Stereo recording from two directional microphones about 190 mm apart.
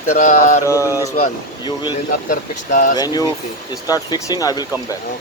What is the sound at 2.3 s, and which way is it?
Speech, 45° left (ahead or behind).